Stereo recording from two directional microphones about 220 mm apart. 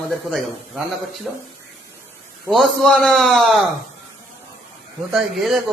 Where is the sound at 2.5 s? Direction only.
Centre (ahead or behind).